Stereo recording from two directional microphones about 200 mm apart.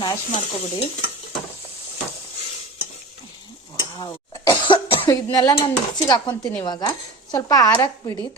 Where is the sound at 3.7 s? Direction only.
20° left (ahead or behind).